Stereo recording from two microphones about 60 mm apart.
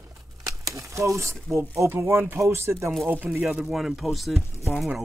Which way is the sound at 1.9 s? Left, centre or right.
Right.